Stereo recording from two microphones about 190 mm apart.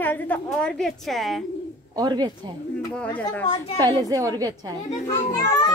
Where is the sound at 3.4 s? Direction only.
25° left (ahead or behind).